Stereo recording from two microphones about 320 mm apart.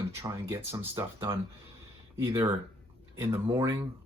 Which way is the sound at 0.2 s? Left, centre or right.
Centre.